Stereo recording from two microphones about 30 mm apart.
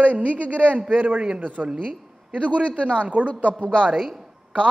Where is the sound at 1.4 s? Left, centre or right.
Right.